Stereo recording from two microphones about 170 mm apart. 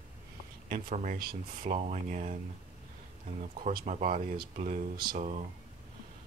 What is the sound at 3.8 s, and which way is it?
Speech, 45° right (ahead or behind).